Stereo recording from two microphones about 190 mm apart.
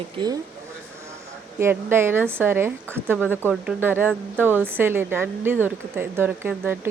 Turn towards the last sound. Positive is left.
turn(degrees=-10)  # may be behind; listen again after turning